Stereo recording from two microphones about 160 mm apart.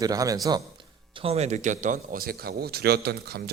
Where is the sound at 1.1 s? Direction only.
40° right (ahead or behind).